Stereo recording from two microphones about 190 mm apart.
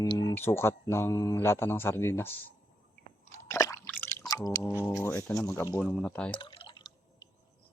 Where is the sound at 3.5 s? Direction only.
15° left (ahead or behind).